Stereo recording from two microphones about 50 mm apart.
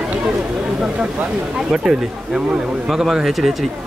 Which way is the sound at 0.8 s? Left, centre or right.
Centre.